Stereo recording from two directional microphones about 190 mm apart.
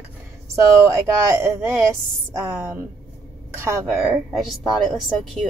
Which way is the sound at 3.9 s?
Centre (ahead or behind).